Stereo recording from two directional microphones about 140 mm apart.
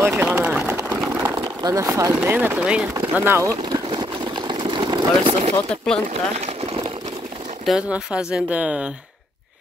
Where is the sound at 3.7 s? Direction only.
35° right (ahead or behind).